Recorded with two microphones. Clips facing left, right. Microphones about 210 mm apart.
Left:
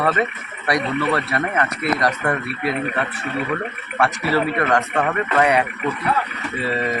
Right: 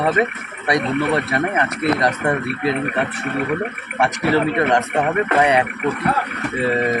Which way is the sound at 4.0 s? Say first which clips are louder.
Right 2 dB; 20° right (ahead or behind).